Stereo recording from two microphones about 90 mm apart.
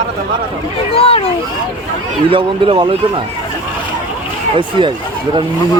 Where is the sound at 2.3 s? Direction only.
70° right (ahead or behind).